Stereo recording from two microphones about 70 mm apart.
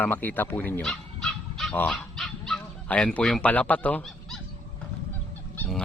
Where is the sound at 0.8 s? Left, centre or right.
Centre.